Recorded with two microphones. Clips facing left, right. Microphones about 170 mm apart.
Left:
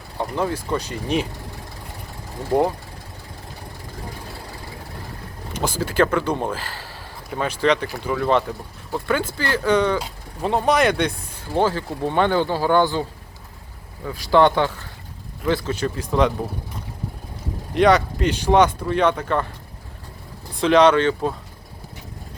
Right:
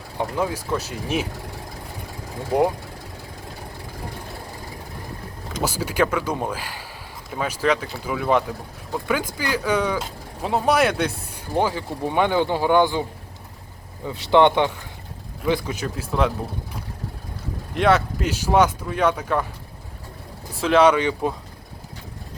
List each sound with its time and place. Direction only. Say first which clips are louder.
0.2 s speech: left 1 dB; 10° right (ahead or behind)
5.6 s speech: left 2 dB; 10° right (ahead or behind)
17.7 s speech: left 3 dB; centre (ahead or behind)
20.6 s speech: left 2 dB; 5° right (ahead or behind)